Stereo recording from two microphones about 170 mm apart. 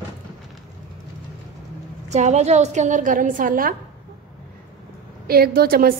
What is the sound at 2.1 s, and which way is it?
A woman's voice, 45° right (ahead or behind).